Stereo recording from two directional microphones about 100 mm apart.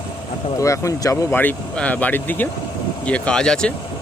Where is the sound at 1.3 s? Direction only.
15° left (ahead or behind).